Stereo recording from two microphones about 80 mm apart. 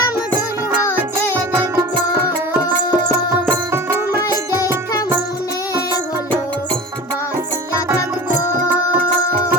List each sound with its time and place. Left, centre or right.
1.4 s music: right